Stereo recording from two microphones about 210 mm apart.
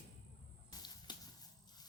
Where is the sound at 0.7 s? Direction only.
20° left (ahead or behind).